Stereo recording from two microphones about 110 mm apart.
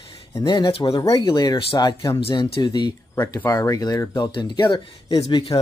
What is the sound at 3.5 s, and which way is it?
Speech, 30° left (ahead or behind).